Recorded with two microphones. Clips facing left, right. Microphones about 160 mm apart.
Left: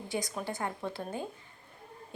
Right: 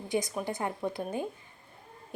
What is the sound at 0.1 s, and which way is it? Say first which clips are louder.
A woman's voice: right 4 dB; 20° right (ahead or behind).